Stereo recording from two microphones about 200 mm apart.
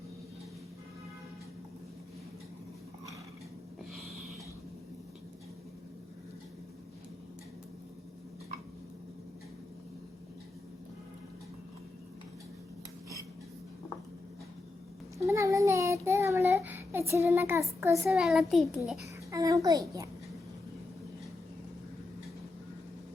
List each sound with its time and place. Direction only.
15.2 s child singing: 15° right (ahead or behind)
18.1 s a child's voice: centre (ahead or behind)
19.3 s a sound: 15° right (ahead or behind)